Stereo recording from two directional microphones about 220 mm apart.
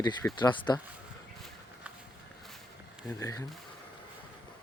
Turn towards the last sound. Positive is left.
turn(degrees=15)  # may be behind; listen again after turning